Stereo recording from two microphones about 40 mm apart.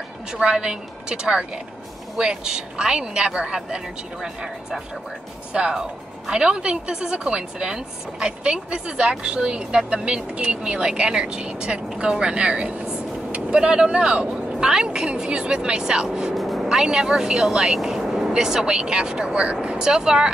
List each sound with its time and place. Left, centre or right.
0.3 s speech: right
16.3 s vehicle: centre
16.6 s speech: centre